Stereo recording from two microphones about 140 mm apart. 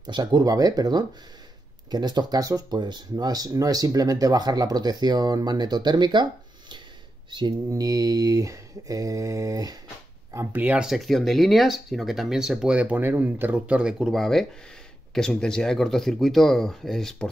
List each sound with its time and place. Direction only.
0.0 s speech: 30° right (ahead or behind)
7.2 s speech: 35° right (ahead or behind)
10.3 s speech: 15° right (ahead or behind); by 17.3 s 5° left (ahead or behind)